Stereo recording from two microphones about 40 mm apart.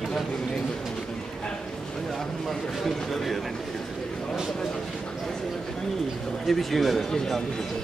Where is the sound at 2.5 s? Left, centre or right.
Centre.